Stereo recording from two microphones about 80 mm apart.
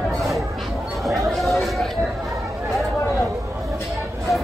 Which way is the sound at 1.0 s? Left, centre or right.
Centre.